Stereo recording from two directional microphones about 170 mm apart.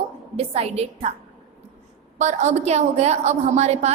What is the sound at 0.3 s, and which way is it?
Speech, 40° right (ahead or behind).